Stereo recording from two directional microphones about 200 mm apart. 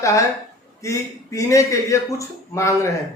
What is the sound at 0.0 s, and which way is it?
A man's voice, 15° left (ahead or behind).